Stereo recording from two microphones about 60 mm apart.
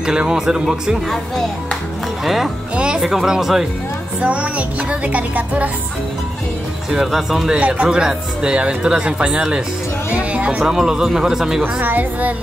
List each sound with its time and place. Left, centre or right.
0.0 s speech: centre
1.1 s speech: centre
2.7 s speech: centre
4.2 s music: right
6.9 s speech: centre
7.5 s speech: right
10.7 s speech: centre
11.6 s a woman's voice: right